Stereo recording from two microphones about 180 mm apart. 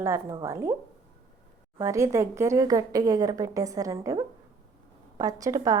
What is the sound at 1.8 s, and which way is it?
A woman's voice, 15° right (ahead or behind).